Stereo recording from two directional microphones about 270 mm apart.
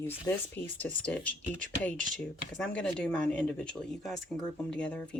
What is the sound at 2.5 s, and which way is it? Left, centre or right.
Speech, centre.